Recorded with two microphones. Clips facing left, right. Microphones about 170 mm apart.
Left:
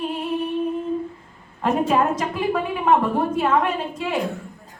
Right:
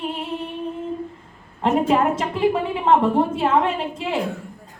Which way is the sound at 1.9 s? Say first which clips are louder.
Right 1 dB; 25° right (ahead or behind).